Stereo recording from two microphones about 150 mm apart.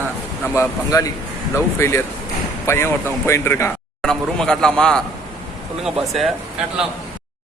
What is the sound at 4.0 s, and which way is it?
A man's voice, 5° left (ahead or behind).